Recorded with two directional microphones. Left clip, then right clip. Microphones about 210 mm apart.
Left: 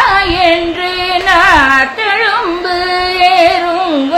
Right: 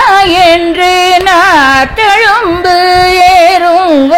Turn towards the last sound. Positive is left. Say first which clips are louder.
# right 5 dB
turn(degrees=-40)  # may be behind; listen again after turning